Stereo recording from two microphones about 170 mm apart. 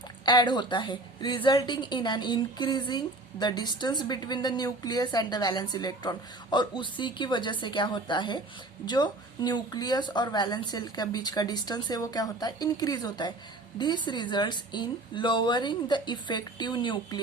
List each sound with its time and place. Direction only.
0.3 s a woman's voice: 25° left (ahead or behind)